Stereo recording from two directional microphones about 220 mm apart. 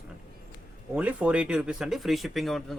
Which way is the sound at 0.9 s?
5° right (ahead or behind).